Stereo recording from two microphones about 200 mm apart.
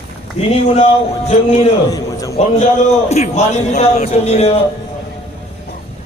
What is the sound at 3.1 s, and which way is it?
Speech, 35° left (ahead or behind).